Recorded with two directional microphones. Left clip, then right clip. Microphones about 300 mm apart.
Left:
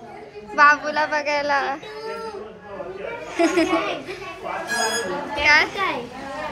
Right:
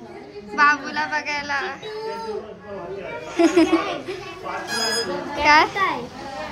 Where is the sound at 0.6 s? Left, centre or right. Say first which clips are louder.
Left 3 dB; centre.